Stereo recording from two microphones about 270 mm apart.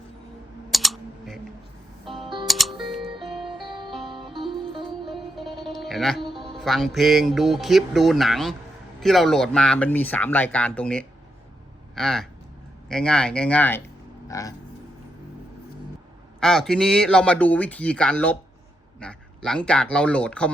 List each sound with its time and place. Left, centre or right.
0.7 s typing: centre
2.0 s music: centre
2.5 s music: centre
2.7 s music: centre
5.0 s music: centre
6.6 s speech: centre
16.4 s speech: centre